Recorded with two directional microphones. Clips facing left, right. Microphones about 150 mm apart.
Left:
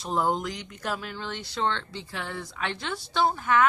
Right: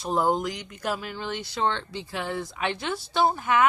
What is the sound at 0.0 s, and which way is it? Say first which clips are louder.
Speech: right 2 dB; 5° right (ahead or behind).